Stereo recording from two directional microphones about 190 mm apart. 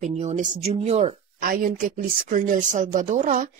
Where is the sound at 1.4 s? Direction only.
45° right (ahead or behind).